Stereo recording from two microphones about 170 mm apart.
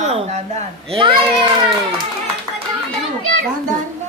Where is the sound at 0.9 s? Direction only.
30° right (ahead or behind).